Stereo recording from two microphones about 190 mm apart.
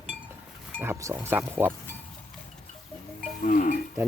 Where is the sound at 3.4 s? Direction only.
45° left (ahead or behind).